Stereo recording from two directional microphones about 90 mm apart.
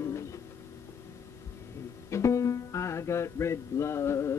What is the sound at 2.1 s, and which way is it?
Music, 35° left (ahead or behind).